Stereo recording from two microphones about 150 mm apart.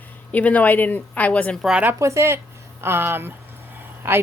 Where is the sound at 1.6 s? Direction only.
5° right (ahead or behind).